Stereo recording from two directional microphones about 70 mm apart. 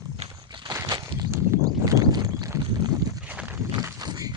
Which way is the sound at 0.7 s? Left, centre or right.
Right.